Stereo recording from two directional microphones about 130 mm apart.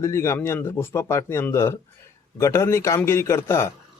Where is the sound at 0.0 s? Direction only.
25° left (ahead or behind).